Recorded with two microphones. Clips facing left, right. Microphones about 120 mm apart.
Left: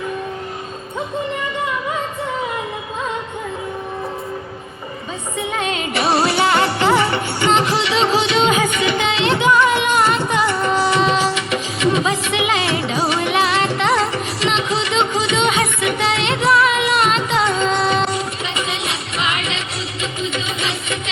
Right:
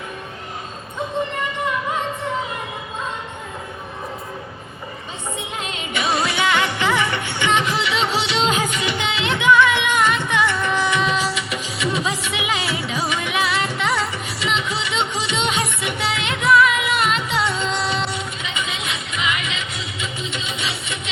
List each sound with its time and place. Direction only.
6.0 s music: 35° left (ahead or behind)
13.6 s music: 90° left
13.8 s music: 40° left (ahead or behind)